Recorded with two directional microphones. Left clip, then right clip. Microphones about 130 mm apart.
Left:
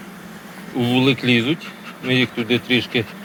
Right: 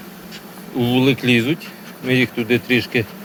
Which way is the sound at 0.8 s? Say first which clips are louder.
Right 1 dB; 35° right (ahead or behind).